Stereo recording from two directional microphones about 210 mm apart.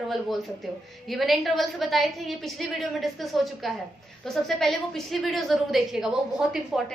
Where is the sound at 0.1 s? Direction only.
Centre (ahead or behind).